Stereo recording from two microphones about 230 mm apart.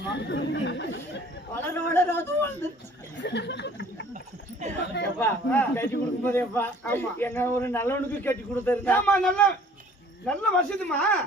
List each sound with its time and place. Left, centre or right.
0.1 s chatter: left
1.5 s a man's voice: centre
3.2 s a sound: left
4.6 s chatter: right
5.2 s a man's voice: centre